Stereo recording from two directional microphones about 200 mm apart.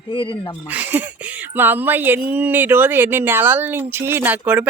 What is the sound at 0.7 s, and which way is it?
Speech, 10° right (ahead or behind).